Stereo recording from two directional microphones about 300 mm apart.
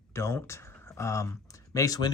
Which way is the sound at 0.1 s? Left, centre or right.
Centre.